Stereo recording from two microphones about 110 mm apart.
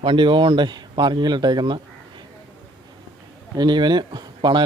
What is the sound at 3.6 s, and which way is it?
Speech, 40° right (ahead or behind).